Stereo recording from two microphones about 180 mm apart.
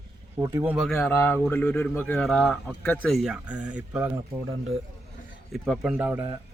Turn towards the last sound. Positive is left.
turn(degrees=-15)  # may be behind; listen again after turning